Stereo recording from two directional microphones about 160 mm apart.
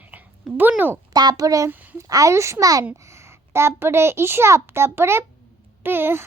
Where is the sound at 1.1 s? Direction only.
25° right (ahead or behind).